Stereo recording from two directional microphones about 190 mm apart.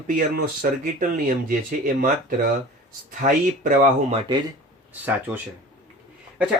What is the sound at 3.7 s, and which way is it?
Speech, 40° right (ahead or behind).